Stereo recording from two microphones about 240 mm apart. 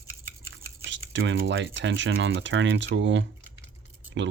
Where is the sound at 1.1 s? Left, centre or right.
Right.